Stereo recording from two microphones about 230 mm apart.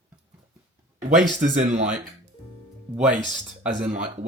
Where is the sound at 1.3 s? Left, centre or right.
Right.